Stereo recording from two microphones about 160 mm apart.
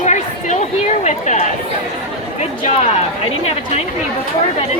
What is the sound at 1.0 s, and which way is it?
Speech, 45° left (ahead or behind).